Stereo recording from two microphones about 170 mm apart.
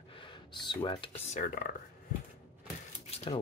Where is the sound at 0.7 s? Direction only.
30° left (ahead or behind).